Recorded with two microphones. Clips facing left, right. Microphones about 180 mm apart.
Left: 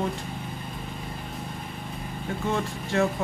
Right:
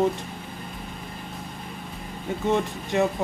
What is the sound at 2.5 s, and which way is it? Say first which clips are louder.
Speech: right 5 dB; 20° right (ahead or behind).